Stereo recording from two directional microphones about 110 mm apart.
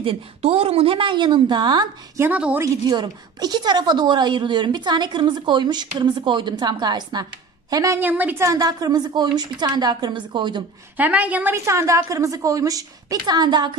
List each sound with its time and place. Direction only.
0.0 s a woman's voice: 60° right (ahead or behind); by 1.9 s 40° right (ahead or behind)
2.1 s a woman's voice: 15° right (ahead or behind)
2.6 s a woman's voice: 40° right (ahead or behind)
7.7 s a woman's voice: 30° right (ahead or behind)
8.0 s a woman's voice: 15° right (ahead or behind)
8.5 s a woman's voice: 35° right (ahead or behind)
11.0 s a woman's voice: 15° right (ahead or behind)
11.5 s a woman's voice: 25° right (ahead or behind); by 13.7 s 45° right (ahead or behind)